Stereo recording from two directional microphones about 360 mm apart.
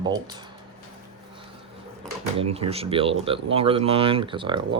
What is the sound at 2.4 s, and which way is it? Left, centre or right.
Speech, centre.